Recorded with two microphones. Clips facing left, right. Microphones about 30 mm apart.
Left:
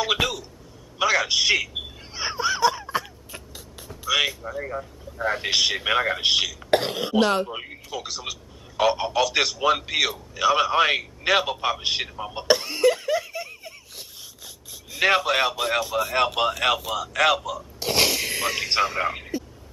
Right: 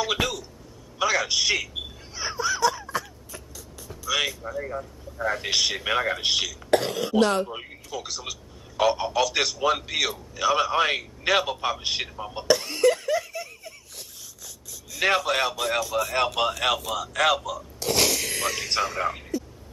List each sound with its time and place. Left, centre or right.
0.0 s a sound: centre
0.9 s speech: centre
2.1 s a sound: left
4.1 s a sound: centre
4.6 s speech: centre
5.2 s speech: left
5.5 s speech: centre
6.7 s speech: left
7.2 s speech: centre
12.7 s laughter: centre
14.4 s a sound: left
15.0 s speech: centre
17.7 s speech: left